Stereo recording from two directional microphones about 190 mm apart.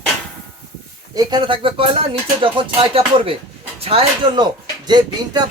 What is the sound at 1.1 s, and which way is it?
A man's voice, 20° right (ahead or behind).